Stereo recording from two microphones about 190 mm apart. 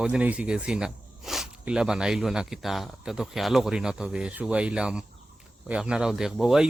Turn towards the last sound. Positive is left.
turn(degrees=0)  # may be behind; listen again after turning